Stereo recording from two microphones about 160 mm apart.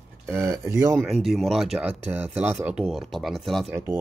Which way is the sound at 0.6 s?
20° right (ahead or behind).